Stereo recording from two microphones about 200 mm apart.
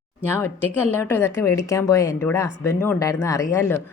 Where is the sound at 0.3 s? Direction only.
10° left (ahead or behind).